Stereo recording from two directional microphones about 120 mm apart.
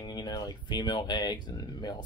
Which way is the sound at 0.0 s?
35° left (ahead or behind).